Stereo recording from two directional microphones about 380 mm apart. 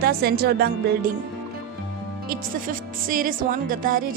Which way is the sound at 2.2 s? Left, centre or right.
Right.